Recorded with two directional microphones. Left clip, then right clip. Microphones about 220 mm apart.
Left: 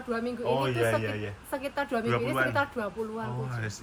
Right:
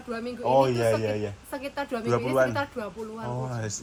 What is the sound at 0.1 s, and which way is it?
A woman's voice, centre (ahead or behind).